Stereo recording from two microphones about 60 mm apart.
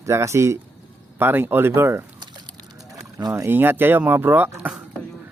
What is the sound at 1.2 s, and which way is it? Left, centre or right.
Speech, right.